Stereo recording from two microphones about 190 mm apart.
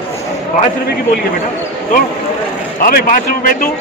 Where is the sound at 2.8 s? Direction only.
45° left (ahead or behind).